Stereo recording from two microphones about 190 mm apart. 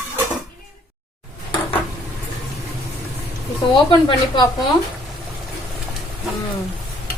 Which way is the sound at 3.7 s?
25° left (ahead or behind).